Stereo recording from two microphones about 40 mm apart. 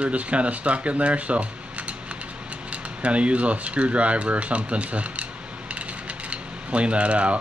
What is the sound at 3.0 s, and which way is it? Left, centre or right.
Speech, right.